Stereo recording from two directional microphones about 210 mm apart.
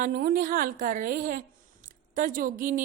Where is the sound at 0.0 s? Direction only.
45° right (ahead or behind).